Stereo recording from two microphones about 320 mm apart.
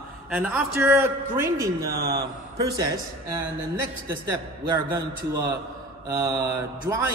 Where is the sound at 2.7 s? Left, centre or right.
Centre.